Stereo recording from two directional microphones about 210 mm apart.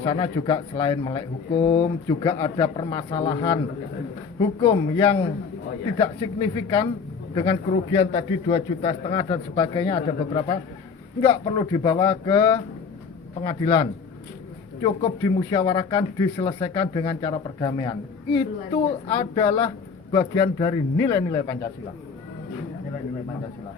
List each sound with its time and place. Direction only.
0.0 s speech: 20° left (ahead or behind)
4.6 s speech: 25° left (ahead or behind)